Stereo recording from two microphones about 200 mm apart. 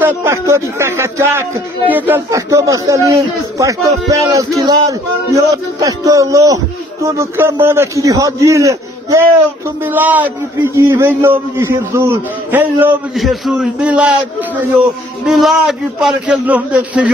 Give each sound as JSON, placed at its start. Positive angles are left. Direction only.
{"t": 0.0, "sound": "speech", "side_deg": -10}
{"t": 4.1, "sound": "speech", "side_deg": -15}
{"t": 15.2, "sound": "a man's voice", "side_deg": 0}